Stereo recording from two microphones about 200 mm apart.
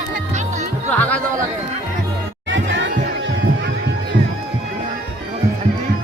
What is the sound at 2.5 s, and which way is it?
Music, 65° right (ahead or behind).